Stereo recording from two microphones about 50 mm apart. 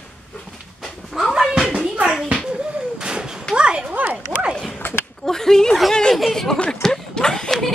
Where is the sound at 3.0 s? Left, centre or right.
Centre.